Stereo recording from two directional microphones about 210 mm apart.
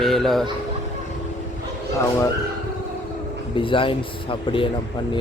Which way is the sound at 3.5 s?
25° left (ahead or behind).